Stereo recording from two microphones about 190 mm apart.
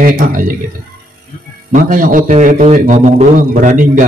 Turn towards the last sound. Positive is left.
turn(degrees=-40)  # may be behind; listen again after turning